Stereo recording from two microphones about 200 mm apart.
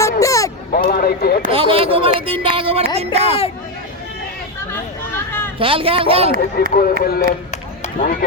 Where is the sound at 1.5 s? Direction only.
30° right (ahead or behind).